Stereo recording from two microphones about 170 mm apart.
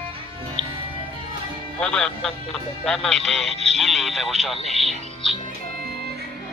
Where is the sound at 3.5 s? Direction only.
40° right (ahead or behind).